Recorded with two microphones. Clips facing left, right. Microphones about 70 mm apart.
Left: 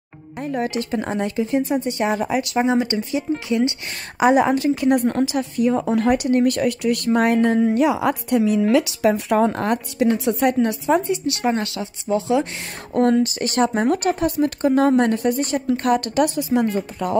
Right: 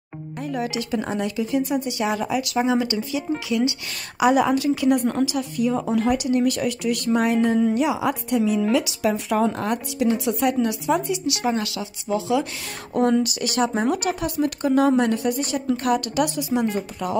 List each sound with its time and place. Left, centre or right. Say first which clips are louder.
0.4 s speech: left 3 dB; left
5.9 s speech: left 2 dB; left